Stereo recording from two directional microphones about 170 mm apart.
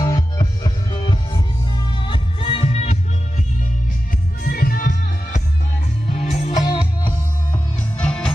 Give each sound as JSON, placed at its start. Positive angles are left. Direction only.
{"t": 0.0, "sound": "music", "side_deg": 25}
{"t": 4.5, "sound": "music", "side_deg": 60}
{"t": 6.0, "sound": "music", "side_deg": 40}
{"t": 6.7, "sound": "music", "side_deg": 30}
{"t": 7.5, "sound": "music", "side_deg": 5}